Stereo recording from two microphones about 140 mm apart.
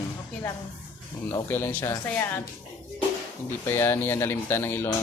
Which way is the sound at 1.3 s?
20° left (ahead or behind).